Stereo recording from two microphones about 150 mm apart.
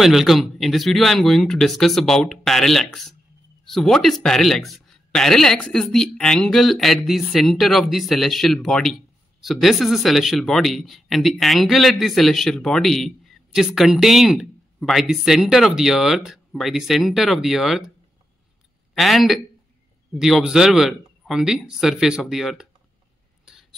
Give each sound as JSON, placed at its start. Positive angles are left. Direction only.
{"t": 0.0, "sound": "speech", "side_deg": 0}
{"t": 18.9, "sound": "speech", "side_deg": 0}
{"t": 23.4, "sound": "a sound", "side_deg": 0}